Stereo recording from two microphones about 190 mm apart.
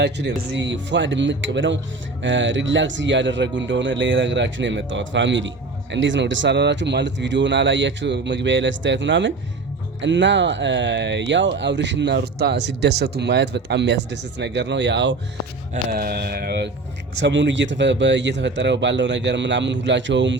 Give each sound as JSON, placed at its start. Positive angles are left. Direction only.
{"t": 0.0, "sound": "speech", "side_deg": -65}
{"t": 15.7, "sound": "speech", "side_deg": -50}
{"t": 17.2, "sound": "speech", "side_deg": -70}